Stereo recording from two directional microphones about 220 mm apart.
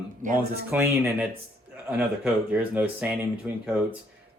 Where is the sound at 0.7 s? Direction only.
10° right (ahead or behind).